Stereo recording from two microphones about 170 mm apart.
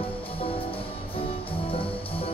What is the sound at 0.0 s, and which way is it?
Music, 30° left (ahead or behind).